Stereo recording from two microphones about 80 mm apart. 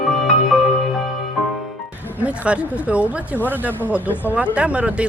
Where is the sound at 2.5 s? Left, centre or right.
Centre.